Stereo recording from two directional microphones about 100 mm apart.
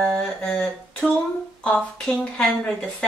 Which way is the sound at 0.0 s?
10° left (ahead or behind).